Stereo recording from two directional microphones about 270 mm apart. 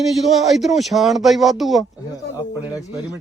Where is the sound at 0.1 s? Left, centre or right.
Centre.